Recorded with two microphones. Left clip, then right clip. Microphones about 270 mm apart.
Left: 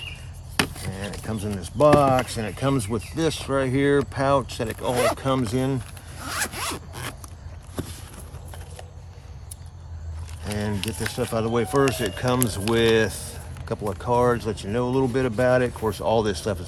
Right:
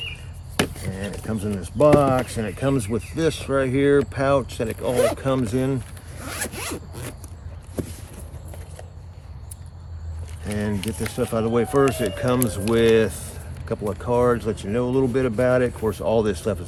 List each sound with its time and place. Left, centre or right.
0.5 s chop: centre
1.3 s speech: left
6.2 s zipper: centre
10.4 s speech: left
10.8 s speech: centre
11.1 s speech: left